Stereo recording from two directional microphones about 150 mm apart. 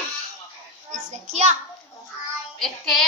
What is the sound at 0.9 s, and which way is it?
Speech, 50° right (ahead or behind).